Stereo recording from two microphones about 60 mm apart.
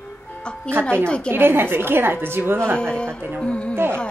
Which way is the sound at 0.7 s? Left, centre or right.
Centre.